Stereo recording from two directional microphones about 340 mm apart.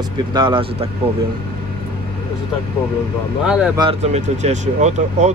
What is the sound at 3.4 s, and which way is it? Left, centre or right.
Speech, centre.